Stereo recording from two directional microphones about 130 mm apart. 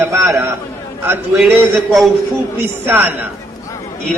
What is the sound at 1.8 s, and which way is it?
Speech, centre (ahead or behind).